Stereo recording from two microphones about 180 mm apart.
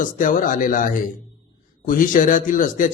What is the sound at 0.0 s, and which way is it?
A man's voice, 45° left (ahead or behind).